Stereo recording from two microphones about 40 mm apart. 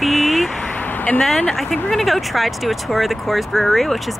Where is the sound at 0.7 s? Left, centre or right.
Left.